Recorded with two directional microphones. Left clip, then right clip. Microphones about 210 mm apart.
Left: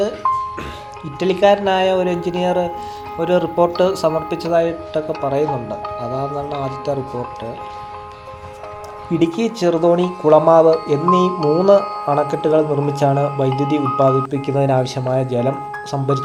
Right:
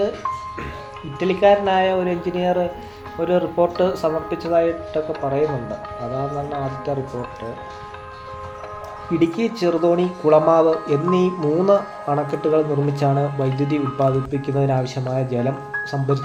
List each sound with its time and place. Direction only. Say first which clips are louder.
1.2 s speech: left 2 dB; 30° left (ahead or behind)
9.1 s speech: left 2 dB; 20° left (ahead or behind)